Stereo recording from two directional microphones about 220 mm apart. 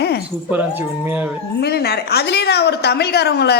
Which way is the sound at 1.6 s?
45° left (ahead or behind).